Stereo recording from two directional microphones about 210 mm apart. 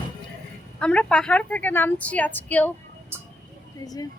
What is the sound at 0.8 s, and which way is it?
A woman's voice, 5° left (ahead or behind).